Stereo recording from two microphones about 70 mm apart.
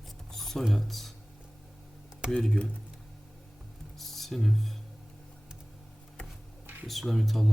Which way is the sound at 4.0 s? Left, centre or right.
Centre.